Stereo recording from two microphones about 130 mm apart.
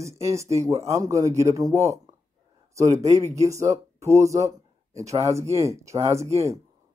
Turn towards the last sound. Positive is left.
turn(degrees=-25)  # may be behind; listen again after turning